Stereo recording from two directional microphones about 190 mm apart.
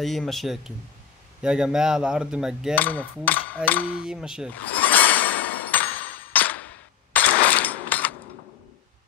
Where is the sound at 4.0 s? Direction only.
5° right (ahead or behind).